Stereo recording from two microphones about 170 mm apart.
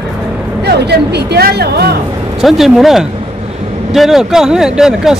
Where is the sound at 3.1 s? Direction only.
35° right (ahead or behind).